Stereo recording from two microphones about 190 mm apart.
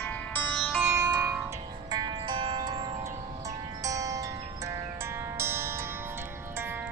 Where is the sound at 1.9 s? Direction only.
25° right (ahead or behind).